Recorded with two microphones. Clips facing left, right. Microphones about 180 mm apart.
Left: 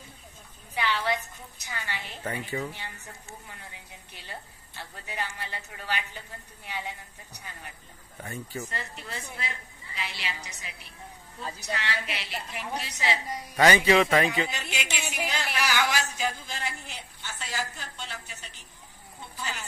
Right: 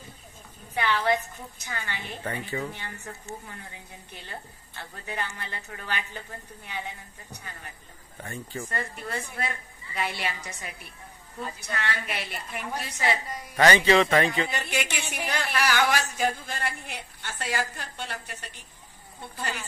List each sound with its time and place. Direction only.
0.7 s a woman's voice: 55° right (ahead or behind)
2.2 s speech: 10° left (ahead or behind)
5.0 s a woman's voice: 50° right (ahead or behind)
8.2 s speech: 5° left (ahead or behind)
8.6 s a woman's voice: 50° right (ahead or behind)
13.6 s speech: 10° left (ahead or behind)
14.5 s speech: 55° right (ahead or behind)